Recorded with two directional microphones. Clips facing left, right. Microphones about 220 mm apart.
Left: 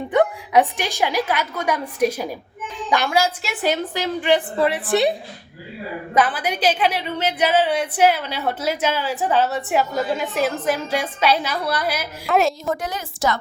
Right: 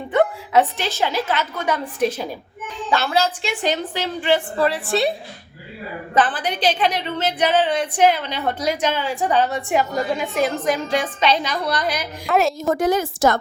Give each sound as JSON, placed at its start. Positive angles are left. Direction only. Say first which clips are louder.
{"t": 0.1, "sound": "a woman's voice", "louder": "even", "side_deg": 15}
{"t": 6.1, "sound": "a woman's voice", "louder": "even", "side_deg": 10}
{"t": 12.6, "sound": "a woman's voice", "louder": "right 7 dB", "side_deg": -45}